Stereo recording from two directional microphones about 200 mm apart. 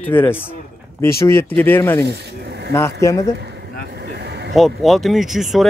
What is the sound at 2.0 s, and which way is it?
Snake, 55° right (ahead or behind).